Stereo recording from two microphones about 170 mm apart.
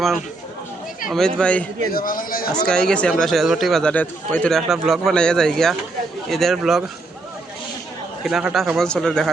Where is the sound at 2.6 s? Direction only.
5° left (ahead or behind).